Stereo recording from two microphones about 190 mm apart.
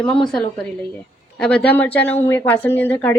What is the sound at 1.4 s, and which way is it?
A woman's voice, 5° left (ahead or behind).